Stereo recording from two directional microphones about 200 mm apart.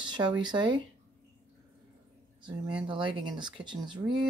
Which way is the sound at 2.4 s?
25° right (ahead or behind).